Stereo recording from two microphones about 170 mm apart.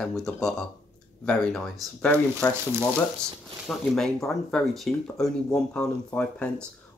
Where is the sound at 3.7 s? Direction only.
Centre (ahead or behind).